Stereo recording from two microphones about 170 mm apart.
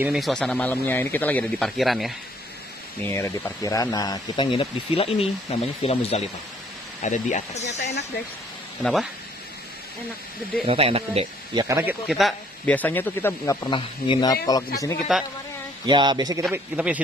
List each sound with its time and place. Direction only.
0.0 s a man's voice: centre (ahead or behind)
3.0 s speech: 15° left (ahead or behind); by 7.8 s 40° left (ahead or behind)
10.7 s speech: 35° right (ahead or behind)
11.6 s a man's voice: 15° right (ahead or behind)
12.7 s speech: 10° left (ahead or behind)
13.7 s speech: 30° left (ahead or behind)
15.1 s a man's voice: 5° right (ahead or behind)
15.8 s speech: 25° right (ahead or behind)
16.5 s speech: 10° right (ahead or behind)